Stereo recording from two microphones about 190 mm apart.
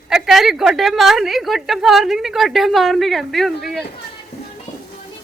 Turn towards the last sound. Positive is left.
turn(degrees=0)  # may be behind; listen again after turning